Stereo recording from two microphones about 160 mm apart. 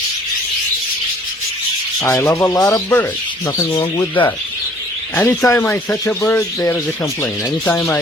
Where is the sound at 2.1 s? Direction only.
10° left (ahead or behind).